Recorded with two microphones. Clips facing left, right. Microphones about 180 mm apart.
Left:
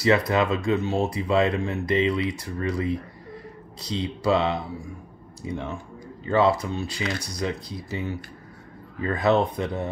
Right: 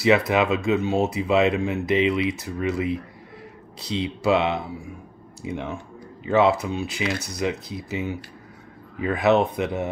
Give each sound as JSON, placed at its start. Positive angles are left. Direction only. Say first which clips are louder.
{"t": 0.0, "sound": "speech", "louder": "right 2 dB", "side_deg": -20}